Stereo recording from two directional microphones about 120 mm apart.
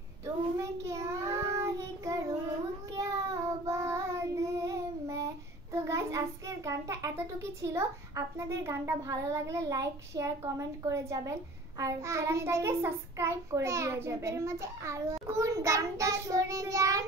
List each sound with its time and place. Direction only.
0.6 s child singing: 25° right (ahead or behind)
8.5 s a child's voice: 20° right (ahead or behind)